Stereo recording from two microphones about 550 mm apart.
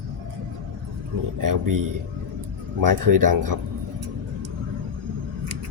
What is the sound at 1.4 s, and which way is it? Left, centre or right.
Speech, right.